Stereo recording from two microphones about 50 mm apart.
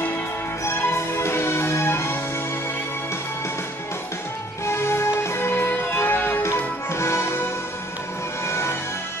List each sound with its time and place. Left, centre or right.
0.7 s music: left
4.6 s music: left
6.4 s music: left
8.5 s music: left